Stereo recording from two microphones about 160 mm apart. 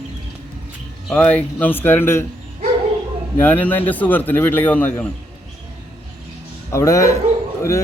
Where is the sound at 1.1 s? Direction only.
10° left (ahead or behind).